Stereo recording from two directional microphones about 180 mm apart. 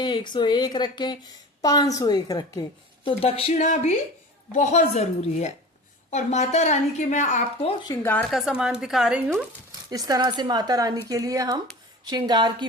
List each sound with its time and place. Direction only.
0.0 s a woman's voice: 25° left (ahead or behind)
7.9 s a woman's voice: 10° left (ahead or behind)
8.3 s speech: centre (ahead or behind)
9.9 s speech: 20° right (ahead or behind)